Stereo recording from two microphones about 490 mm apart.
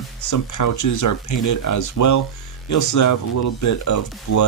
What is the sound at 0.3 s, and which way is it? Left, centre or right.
Speech, left.